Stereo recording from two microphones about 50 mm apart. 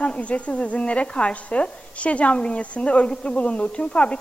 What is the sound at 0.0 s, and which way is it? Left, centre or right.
Speech, left.